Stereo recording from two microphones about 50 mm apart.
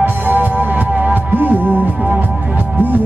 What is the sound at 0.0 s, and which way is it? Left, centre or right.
Music, right.